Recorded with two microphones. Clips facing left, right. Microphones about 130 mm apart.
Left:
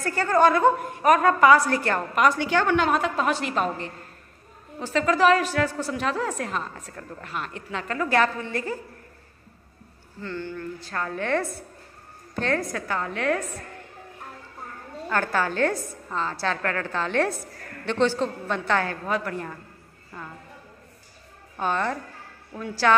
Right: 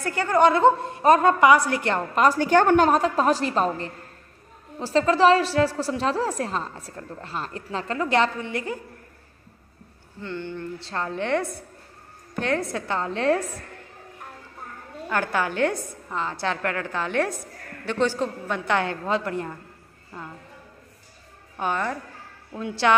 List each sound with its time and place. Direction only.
0.0 s a woman's voice: 20° right (ahead or behind)
2.2 s a woman's voice: 45° right (ahead or behind)
8.0 s a woman's voice: 20° right (ahead or behind)
10.2 s a woman's voice: 20° right (ahead or behind)
15.0 s a woman's voice: 15° right (ahead or behind)
21.5 s a woman's voice: 10° right (ahead or behind)